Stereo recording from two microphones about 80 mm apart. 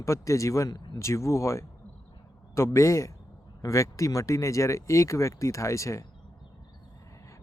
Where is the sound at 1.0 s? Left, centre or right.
Left.